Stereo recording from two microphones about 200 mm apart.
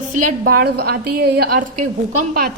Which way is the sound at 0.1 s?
40° right (ahead or behind).